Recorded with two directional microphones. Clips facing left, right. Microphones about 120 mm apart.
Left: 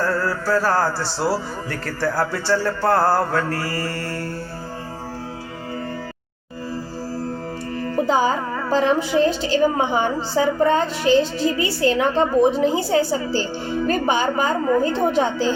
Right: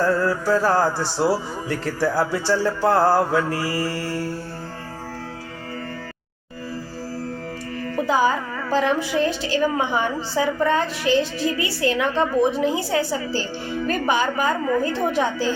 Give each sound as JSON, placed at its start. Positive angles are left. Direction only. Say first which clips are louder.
{"t": 0.0, "sound": "speech", "louder": "right 2 dB", "side_deg": -20}
{"t": 7.9, "sound": "a woman's voice", "louder": "left 1 dB", "side_deg": 30}